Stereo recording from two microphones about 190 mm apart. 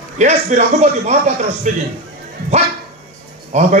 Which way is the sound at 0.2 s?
40° right (ahead or behind).